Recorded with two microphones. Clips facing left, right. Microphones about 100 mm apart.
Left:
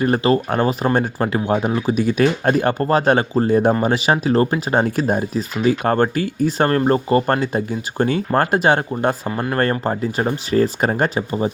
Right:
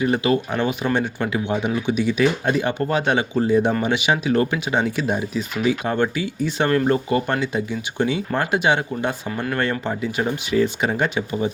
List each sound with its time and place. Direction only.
0.0 s speech: 40° left (ahead or behind)